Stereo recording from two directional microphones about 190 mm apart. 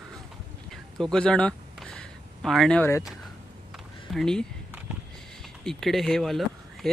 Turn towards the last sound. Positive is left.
turn(degrees=0)  # may be behind; listen again after turning